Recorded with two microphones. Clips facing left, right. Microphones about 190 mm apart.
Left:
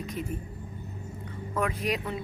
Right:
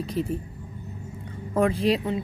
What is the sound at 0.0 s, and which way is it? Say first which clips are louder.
Speech: right 7 dB; 30° right (ahead or behind).